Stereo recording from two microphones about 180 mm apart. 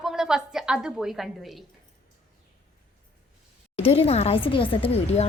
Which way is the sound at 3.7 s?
35° left (ahead or behind).